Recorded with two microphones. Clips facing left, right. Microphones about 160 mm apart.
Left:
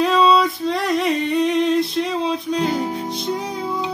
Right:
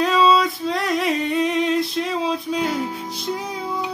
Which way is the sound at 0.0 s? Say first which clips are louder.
Left 1 dB; centre (ahead or behind).